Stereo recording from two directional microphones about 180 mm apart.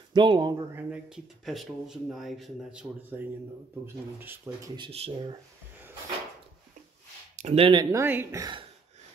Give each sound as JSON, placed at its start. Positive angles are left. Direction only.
{"t": 0.1, "sound": "speech", "side_deg": -25}
{"t": 0.7, "sound": "a woman's voice", "side_deg": -5}
{"t": 4.7, "sound": "speech", "side_deg": -30}
{"t": 7.3, "sound": "speech", "side_deg": -35}
{"t": 7.9, "sound": "a woman's voice", "side_deg": -10}